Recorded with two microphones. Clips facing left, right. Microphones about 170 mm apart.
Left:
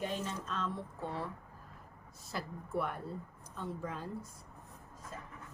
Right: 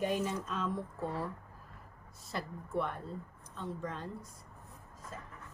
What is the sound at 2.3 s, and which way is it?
A woman's voice, 5° left (ahead or behind).